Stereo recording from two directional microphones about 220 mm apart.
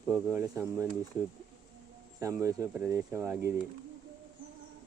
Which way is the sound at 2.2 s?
15° right (ahead or behind).